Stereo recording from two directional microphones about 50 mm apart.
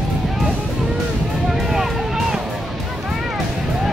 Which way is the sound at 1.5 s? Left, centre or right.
Centre.